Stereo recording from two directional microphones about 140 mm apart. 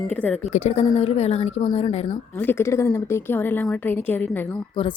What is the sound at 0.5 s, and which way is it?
Speech, 50° left (ahead or behind).